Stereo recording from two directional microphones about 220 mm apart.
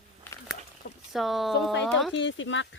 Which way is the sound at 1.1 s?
Centre (ahead or behind).